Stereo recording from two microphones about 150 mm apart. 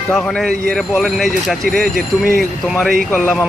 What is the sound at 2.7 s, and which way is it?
Speech, centre (ahead or behind).